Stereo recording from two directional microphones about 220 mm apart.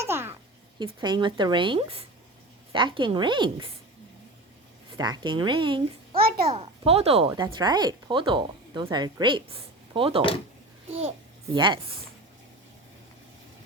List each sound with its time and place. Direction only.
0.0 s a sound: 10° right (ahead or behind)
0.8 s speech: 20° right (ahead or behind)
4.9 s a child's voice: 20° right (ahead or behind)
6.2 s a sound: 45° right (ahead or behind)
6.5 s speech: 25° right (ahead or behind)
11.5 s speech: 20° right (ahead or behind)